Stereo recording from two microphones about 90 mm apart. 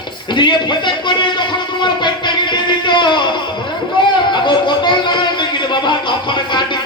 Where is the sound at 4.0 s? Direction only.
65° left (ahead or behind).